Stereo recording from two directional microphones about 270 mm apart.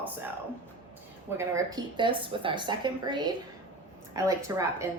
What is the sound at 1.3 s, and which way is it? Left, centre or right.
A woman's voice, centre.